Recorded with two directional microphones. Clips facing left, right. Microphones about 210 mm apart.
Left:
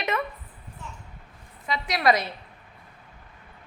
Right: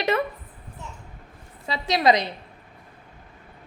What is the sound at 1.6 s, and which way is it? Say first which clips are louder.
Speech: right 3 dB; 25° right (ahead or behind).